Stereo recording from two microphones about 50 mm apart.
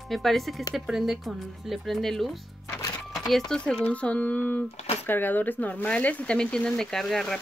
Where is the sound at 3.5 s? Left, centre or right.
Centre.